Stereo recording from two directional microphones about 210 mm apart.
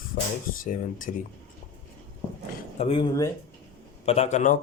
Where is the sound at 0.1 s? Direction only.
45° left (ahead or behind).